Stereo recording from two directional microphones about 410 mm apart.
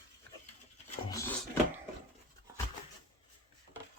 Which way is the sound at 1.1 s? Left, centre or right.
Centre.